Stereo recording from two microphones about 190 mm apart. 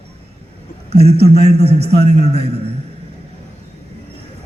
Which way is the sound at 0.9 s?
35° right (ahead or behind).